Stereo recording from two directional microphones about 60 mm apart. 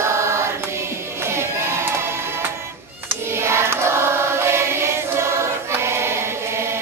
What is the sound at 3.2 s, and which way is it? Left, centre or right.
Choir, right.